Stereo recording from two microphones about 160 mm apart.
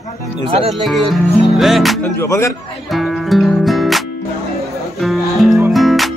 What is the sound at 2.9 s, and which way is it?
Music, centre (ahead or behind).